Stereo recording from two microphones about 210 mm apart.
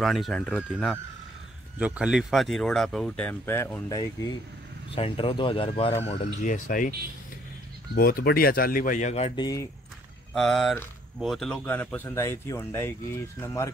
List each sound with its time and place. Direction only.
0.0 s speech: centre (ahead or behind); by 6.9 s 40° left (ahead or behind)
7.9 s speech: 45° left (ahead or behind)
10.3 s speech: centre (ahead or behind)